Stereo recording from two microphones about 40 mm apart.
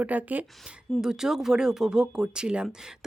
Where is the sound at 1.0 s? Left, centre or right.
Centre.